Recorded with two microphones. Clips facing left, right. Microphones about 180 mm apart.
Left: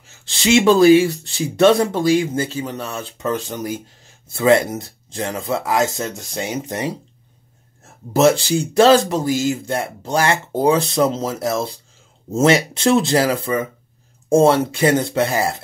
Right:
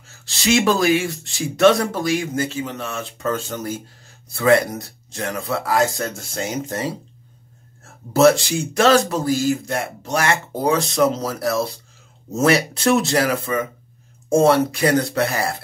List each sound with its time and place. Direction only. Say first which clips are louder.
0.4 s speech: left 5 dB; 25° left (ahead or behind)
3.2 s speech: left 2 dB; 15° left (ahead or behind)
8.1 s speech: even; 25° left (ahead or behind)
9.1 s speech: even; 20° left (ahead or behind)